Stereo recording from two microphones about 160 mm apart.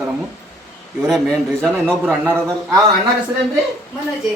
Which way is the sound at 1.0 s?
Centre (ahead or behind).